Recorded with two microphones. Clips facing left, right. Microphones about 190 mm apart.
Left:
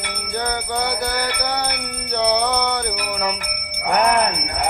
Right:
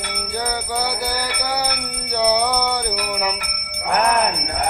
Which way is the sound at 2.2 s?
10° right (ahead or behind).